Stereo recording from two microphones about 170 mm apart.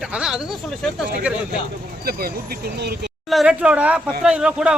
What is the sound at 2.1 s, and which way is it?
Speech, 60° right (ahead or behind).